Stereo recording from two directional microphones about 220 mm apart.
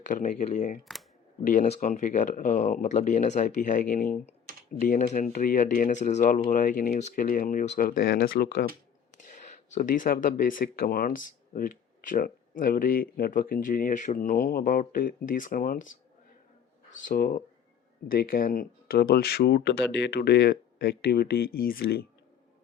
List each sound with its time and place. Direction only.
0.1 s speech: 35° left (ahead or behind)
17.1 s speech: 40° left (ahead or behind)